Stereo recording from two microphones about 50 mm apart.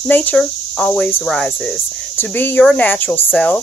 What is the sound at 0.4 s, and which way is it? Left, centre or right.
Cricket, centre.